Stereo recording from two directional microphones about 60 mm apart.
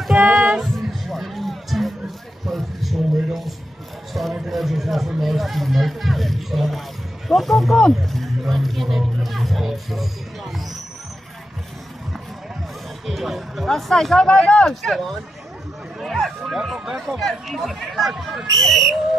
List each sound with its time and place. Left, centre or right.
0.2 s music: centre
0.6 s music: centre
2.4 s a sound: centre
4.1 s speech: centre
13.0 s speech: centre